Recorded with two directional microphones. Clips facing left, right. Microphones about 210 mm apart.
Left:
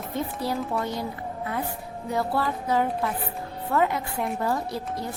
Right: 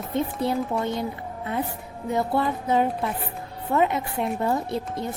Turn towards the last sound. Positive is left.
turn(degrees=-25)  # may be behind; listen again after turning